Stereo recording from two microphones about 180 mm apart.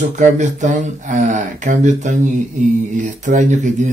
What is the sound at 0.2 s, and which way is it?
Speech, 40° right (ahead or behind).